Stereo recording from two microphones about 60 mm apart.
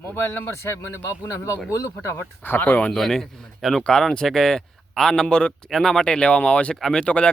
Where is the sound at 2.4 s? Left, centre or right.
Left.